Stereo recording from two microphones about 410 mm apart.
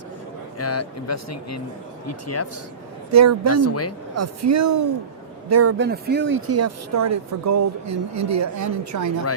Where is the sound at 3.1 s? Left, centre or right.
Right.